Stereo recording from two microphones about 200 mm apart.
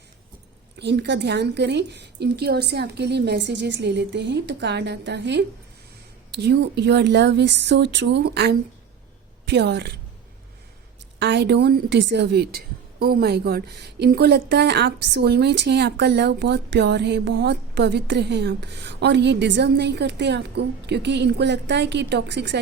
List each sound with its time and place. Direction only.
0.8 s a woman's voice: 60° right (ahead or behind)
11.2 s a woman's voice: 60° right (ahead or behind)